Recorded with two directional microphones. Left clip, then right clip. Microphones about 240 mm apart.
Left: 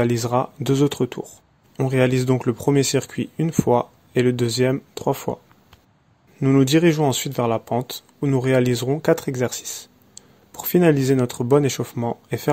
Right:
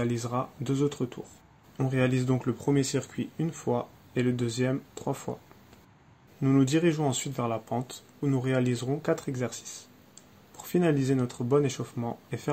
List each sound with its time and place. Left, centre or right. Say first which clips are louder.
0.0 s speech: left 11 dB; left
6.4 s speech: left 8 dB; left